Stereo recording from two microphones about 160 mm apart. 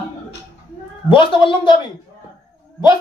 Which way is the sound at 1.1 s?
30° left (ahead or behind).